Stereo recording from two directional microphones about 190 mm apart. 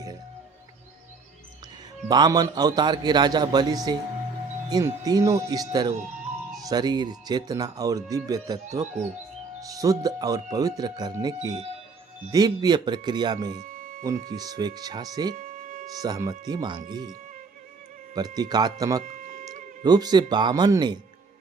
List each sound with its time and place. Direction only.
2.0 s speech: 20° right (ahead or behind)
13.6 s music: 45° right (ahead or behind)
14.0 s speech: 20° right (ahead or behind)
15.4 s music: 45° right (ahead or behind)
16.0 s speech: 20° right (ahead or behind)
18.1 s speech: 20° right (ahead or behind)
19.0 s tick-tock: 45° right (ahead or behind)
19.8 s speech: 20° right (ahead or behind)